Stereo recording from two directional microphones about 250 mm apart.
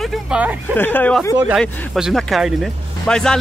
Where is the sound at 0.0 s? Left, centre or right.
Centre.